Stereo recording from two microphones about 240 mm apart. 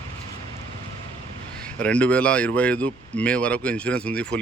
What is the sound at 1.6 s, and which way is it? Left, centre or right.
Speech, centre.